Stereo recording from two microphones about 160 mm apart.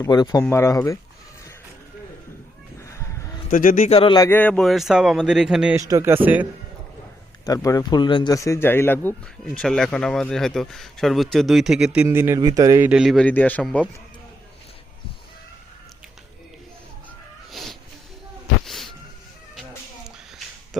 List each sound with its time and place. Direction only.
0.0 s speech: 25° left (ahead or behind)
2.8 s a sound: 20° left (ahead or behind)
3.5 s a man's voice: 55° left (ahead or behind)
3.8 s a man's voice: 35° left (ahead or behind)
4.2 s speech: 10° left (ahead or behind); by 5.7 s 5° right (ahead or behind)
5.7 s speech: 20° right (ahead or behind)
7.4 s speech: 20° left (ahead or behind)
9.6 s speech: 5° left (ahead or behind); by 12.9 s 20° right (ahead or behind)
12.9 s speech: centre (ahead or behind)
17.5 s cat: centre (ahead or behind)
18.6 s insect: centre (ahead or behind)